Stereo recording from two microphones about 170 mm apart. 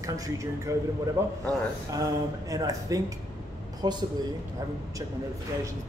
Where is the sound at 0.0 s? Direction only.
20° right (ahead or behind).